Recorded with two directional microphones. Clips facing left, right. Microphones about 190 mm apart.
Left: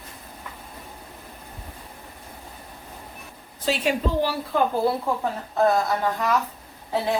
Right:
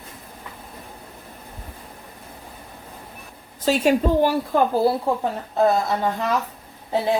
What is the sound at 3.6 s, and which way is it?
Speech, 45° right (ahead or behind).